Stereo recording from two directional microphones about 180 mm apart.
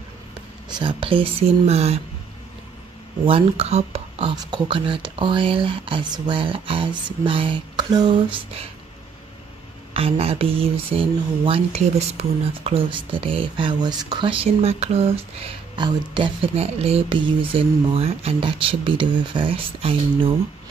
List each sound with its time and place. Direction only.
0.7 s speech: 25° right (ahead or behind)
3.3 s speech: 30° right (ahead or behind)
9.9 s speech: 35° right (ahead or behind)